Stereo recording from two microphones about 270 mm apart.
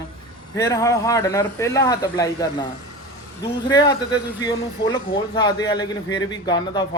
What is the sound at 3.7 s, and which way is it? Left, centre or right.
Speech, centre.